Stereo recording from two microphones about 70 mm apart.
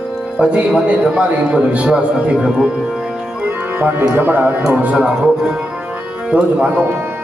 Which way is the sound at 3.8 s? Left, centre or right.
Right.